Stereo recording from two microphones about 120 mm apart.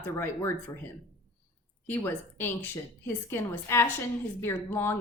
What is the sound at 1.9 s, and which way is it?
A woman's voice, 15° left (ahead or behind).